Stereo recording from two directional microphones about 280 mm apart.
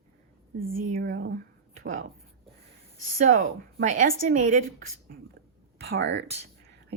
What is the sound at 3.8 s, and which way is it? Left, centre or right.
A woman's voice, right.